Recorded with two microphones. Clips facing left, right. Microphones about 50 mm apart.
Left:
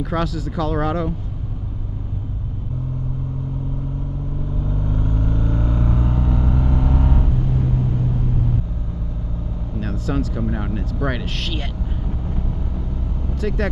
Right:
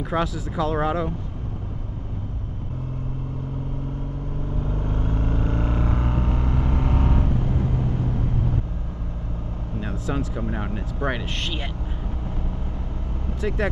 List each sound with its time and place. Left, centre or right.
0.0 s speech: centre
4.6 s vehicle: right
9.8 s speech: centre
13.4 s speech: centre